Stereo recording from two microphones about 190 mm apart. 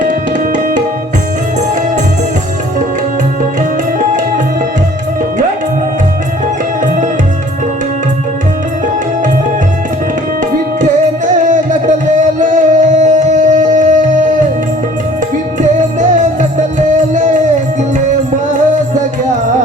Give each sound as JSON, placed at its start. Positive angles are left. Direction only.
{"t": 0.0, "sound": "music", "side_deg": -40}
{"t": 6.8, "sound": "music", "side_deg": -45}
{"t": 11.4, "sound": "music", "side_deg": -40}
{"t": 16.0, "sound": "music", "side_deg": -40}